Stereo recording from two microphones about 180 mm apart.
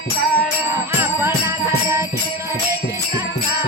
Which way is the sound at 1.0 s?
15° right (ahead or behind).